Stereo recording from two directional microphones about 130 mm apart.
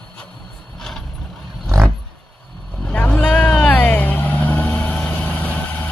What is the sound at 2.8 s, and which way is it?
Vehicle, 10° left (ahead or behind).